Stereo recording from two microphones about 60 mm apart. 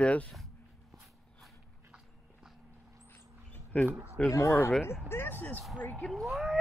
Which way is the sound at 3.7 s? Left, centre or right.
Left.